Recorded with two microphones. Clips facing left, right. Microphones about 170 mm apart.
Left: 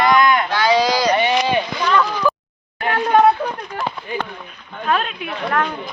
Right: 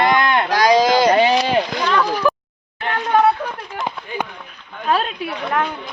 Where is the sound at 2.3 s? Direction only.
15° right (ahead or behind).